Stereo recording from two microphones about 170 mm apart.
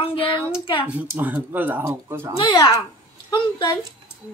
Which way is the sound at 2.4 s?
20° left (ahead or behind).